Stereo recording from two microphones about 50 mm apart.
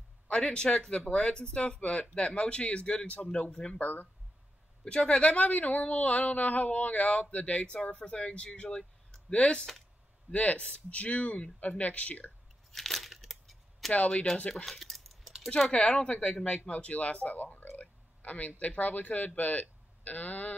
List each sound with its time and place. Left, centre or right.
0.3 s speech: centre
3.8 s speech: left
4.8 s speech: centre
12.7 s a sound: centre
13.9 s speech: left
14.7 s a sound: centre
15.6 s speech: centre
17.6 s a sound: left
18.6 s speech: left